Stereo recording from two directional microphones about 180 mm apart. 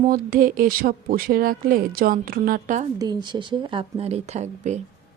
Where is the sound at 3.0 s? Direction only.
25° right (ahead or behind); by 4.7 s 40° right (ahead or behind).